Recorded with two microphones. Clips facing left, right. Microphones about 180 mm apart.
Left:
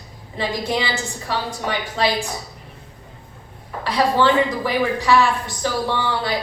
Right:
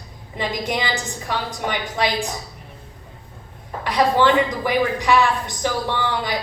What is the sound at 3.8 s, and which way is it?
A man's voice, 15° right (ahead or behind).